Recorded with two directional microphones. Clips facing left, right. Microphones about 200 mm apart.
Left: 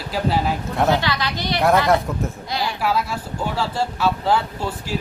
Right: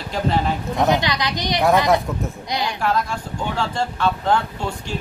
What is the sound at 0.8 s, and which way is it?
A woman's voice, 15° right (ahead or behind).